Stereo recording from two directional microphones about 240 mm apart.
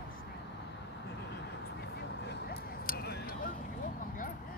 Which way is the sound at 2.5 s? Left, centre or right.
Left.